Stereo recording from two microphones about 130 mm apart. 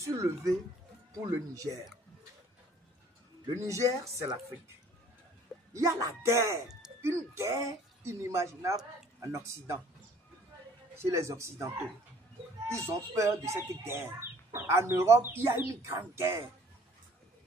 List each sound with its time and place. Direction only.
0.0 s speech: 25° right (ahead or behind)
3.6 s speech: 25° right (ahead or behind)
5.7 s speech: 25° right (ahead or behind)
11.0 s speech: 20° right (ahead or behind)